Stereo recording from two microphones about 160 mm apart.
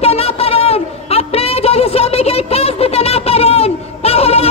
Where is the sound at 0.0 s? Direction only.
40° left (ahead or behind).